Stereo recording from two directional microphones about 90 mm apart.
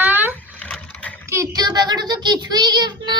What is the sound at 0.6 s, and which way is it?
Vehicle, 15° left (ahead or behind).